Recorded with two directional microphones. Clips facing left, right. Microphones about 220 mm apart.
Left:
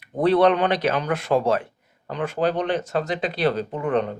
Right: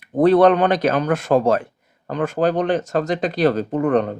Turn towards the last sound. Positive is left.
turn(degrees=-45)  # may be behind; listen again after turning